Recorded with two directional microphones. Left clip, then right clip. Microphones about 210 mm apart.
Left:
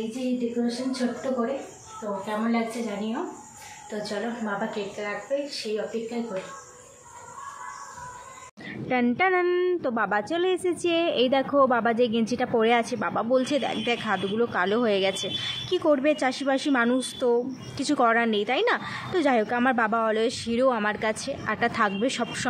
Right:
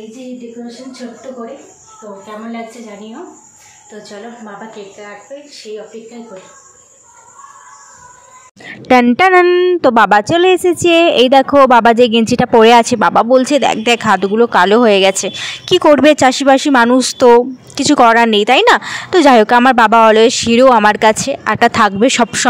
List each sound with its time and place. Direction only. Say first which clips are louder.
4.7 s speech: right 1 dB; centre (ahead or behind)
8.6 s a sound: right 17 dB; 55° right (ahead or behind)
9.0 s speech: right 12 dB; 50° right (ahead or behind)